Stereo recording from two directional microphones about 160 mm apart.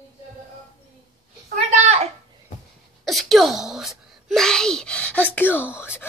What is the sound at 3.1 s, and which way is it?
Speech, centre (ahead or behind).